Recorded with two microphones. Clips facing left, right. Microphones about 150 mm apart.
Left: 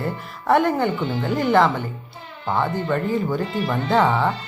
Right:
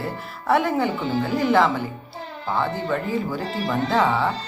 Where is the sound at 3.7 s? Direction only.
Centre (ahead or behind).